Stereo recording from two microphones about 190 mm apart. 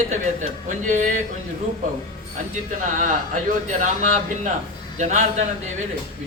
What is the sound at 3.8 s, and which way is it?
A man's voice, 40° right (ahead or behind).